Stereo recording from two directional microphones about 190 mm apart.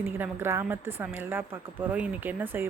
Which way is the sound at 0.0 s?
10° right (ahead or behind).